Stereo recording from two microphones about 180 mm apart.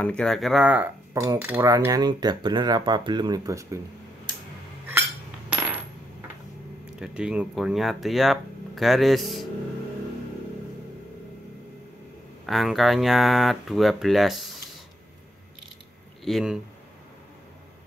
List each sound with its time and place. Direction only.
0.0 s speech: 5° left (ahead or behind)
1.2 s cutlery: 15° right (ahead or behind)
5.5 s coin: 5° right (ahead or behind)
7.0 s speech: 5° right (ahead or behind)
12.4 s speech: centre (ahead or behind)
16.3 s speech: centre (ahead or behind)